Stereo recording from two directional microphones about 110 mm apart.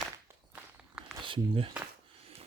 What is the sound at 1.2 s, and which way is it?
Speech, 50° right (ahead or behind).